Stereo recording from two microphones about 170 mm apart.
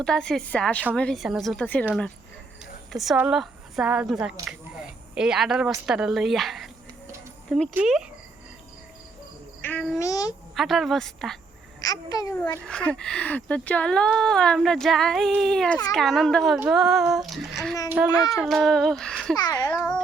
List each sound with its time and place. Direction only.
0.0 s speech: 5° left (ahead or behind)
2.9 s speech: centre (ahead or behind)
4.4 s a sound: 5° right (ahead or behind)
5.8 s speech: 5° right (ahead or behind)
7.7 s speech: 5° right (ahead or behind)
9.6 s insect: 10° left (ahead or behind)
10.0 s a child's voice: 20° left (ahead or behind)
10.5 s speech: centre (ahead or behind)
11.8 s a child's voice: 20° left (ahead or behind)
12.6 s a child's voice: 5° left (ahead or behind)
19.4 s a child's voice: 25° left (ahead or behind)